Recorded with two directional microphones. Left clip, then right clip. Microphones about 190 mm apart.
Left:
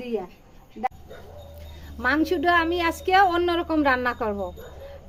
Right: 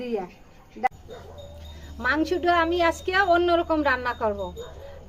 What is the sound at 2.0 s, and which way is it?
A woman's voice, 40° left (ahead or behind).